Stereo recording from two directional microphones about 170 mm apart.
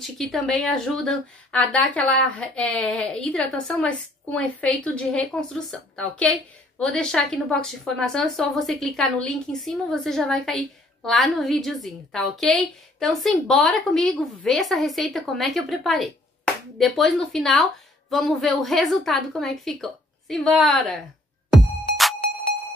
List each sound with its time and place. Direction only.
0.0 s speech: centre (ahead or behind)